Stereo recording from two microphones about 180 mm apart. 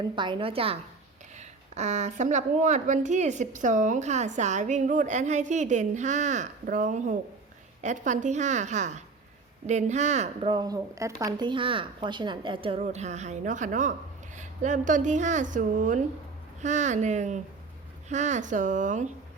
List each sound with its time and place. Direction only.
0.0 s a woman's voice: 25° right (ahead or behind)
10.5 s speech: 20° right (ahead or behind)
12.8 s a woman's voice: 40° right (ahead or behind)